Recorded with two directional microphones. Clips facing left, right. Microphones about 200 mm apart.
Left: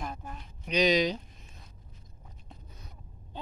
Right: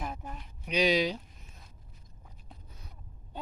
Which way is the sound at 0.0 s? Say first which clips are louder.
Even; 5° right (ahead or behind).